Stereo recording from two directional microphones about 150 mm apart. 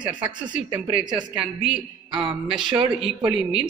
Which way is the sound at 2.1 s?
35° right (ahead or behind).